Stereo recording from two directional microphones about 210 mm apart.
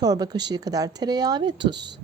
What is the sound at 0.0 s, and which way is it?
Speech, 20° right (ahead or behind).